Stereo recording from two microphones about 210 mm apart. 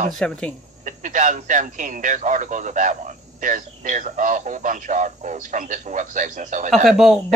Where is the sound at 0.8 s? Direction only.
35° right (ahead or behind).